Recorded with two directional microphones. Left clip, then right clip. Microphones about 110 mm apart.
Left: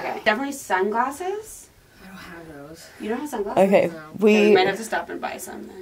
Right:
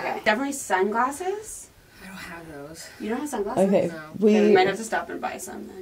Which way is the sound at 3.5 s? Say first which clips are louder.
Left 5 dB; 25° left (ahead or behind).